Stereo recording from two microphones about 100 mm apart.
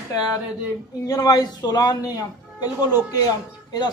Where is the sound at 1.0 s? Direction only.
40° left (ahead or behind).